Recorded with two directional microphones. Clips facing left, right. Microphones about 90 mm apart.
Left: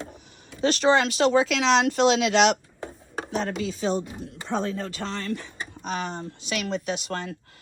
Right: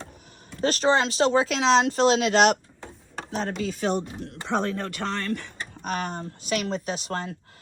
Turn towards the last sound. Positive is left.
turn(degrees=-35)  # may be behind; listen again after turning